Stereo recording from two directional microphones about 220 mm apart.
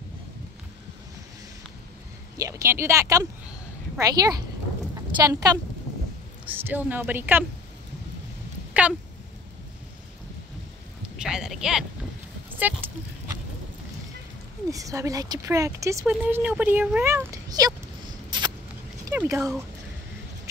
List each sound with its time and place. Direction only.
2.3 s a woman's voice: 15° right (ahead or behind)
11.1 s speech: 5° right (ahead or behind)
12.4 s a sound: 10° right (ahead or behind)
14.7 s speech: 15° right (ahead or behind)
18.3 s rodents: 20° right (ahead or behind)
19.0 s speech: 10° right (ahead or behind)